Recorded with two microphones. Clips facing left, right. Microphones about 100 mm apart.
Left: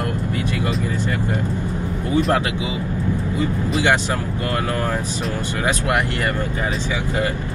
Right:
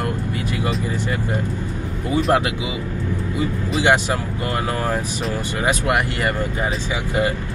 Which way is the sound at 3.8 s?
15° right (ahead or behind).